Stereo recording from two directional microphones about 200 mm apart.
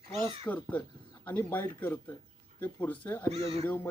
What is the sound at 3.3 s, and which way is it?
Speech, 30° right (ahead or behind).